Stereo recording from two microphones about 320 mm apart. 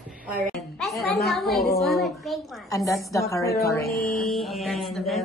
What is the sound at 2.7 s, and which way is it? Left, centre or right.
A woman's voice, centre.